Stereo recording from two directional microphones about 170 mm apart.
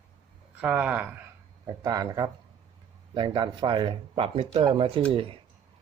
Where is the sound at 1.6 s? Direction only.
20° right (ahead or behind).